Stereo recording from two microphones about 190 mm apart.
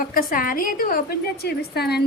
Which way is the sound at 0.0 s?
45° left (ahead or behind).